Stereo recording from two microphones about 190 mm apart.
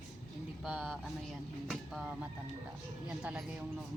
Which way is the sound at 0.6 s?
Centre (ahead or behind).